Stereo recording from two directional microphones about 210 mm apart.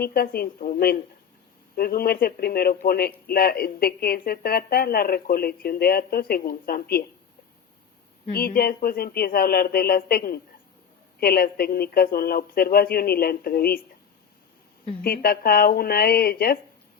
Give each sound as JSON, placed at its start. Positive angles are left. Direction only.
{"t": 0.0, "sound": "speech", "side_deg": 45}
{"t": 8.3, "sound": "speech", "side_deg": 45}
{"t": 15.0, "sound": "speech", "side_deg": 45}